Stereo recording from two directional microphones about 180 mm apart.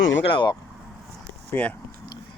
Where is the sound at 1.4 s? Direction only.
10° left (ahead or behind).